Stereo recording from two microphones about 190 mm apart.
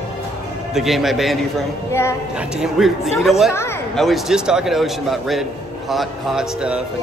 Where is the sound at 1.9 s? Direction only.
15° left (ahead or behind).